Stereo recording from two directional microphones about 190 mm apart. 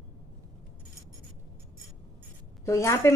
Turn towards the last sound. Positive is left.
turn(degrees=15)  # may be behind; listen again after turning